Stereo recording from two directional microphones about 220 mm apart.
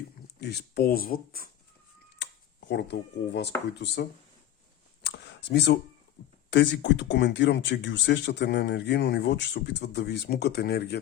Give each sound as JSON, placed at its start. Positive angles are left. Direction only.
{"t": 0.3, "sound": "speech", "side_deg": 50}
{"t": 2.6, "sound": "speech", "side_deg": 50}
{"t": 5.0, "sound": "a sound", "side_deg": 50}
{"t": 6.5, "sound": "speech", "side_deg": 55}